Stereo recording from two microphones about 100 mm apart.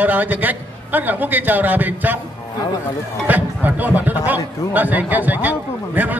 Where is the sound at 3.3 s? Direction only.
15° right (ahead or behind).